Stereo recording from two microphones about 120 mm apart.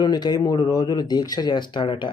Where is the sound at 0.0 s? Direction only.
35° left (ahead or behind).